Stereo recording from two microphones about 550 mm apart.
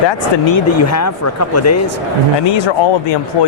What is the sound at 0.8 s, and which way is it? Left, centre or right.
Speech, left.